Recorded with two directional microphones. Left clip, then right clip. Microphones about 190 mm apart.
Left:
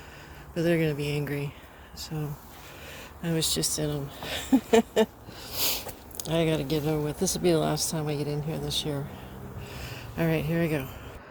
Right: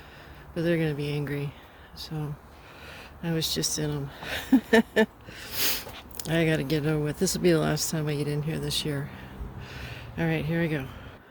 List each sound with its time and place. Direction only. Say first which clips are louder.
0.5 s speech: left 1 dB; 15° right (ahead or behind); by 9.0 s 40° right (ahead or behind)
9.6 s a sound: right 1 dB; 20° right (ahead or behind)
10.2 s speech: left 1 dB; 10° right (ahead or behind)